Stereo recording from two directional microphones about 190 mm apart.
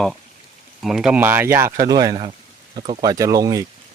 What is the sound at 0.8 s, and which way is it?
Speech, centre (ahead or behind).